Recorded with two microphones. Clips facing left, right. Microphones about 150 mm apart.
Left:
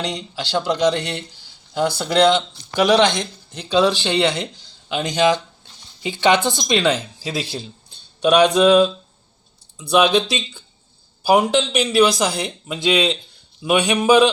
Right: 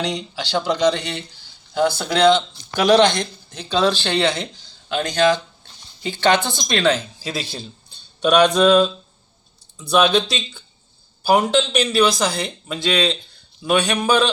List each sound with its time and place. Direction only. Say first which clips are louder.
0.0 s speech: right 1 dB; 5° left (ahead or behind)